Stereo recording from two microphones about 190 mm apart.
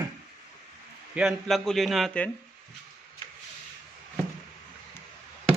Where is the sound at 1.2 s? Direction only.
Centre (ahead or behind).